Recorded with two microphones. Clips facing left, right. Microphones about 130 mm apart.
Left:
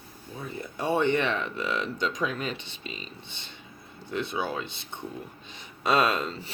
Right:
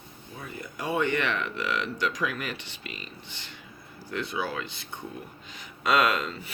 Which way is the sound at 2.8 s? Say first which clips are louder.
Left 2 dB; 70° right (ahead or behind).